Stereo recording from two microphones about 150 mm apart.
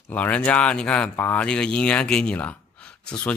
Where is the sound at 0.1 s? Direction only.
10° left (ahead or behind).